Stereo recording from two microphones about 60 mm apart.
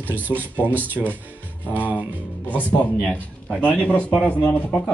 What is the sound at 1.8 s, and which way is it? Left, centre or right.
Speech, left.